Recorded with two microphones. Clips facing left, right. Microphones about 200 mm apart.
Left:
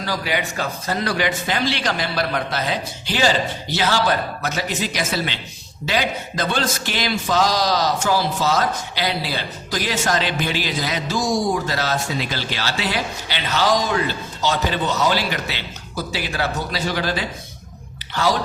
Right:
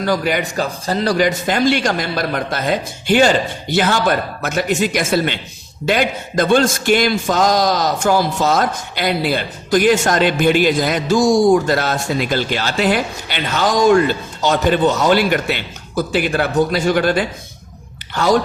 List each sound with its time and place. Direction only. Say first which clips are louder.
0.0 s a man's voice: right 6 dB; 50° right (ahead or behind)